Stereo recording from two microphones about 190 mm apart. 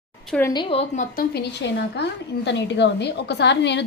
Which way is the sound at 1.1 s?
55° left (ahead or behind).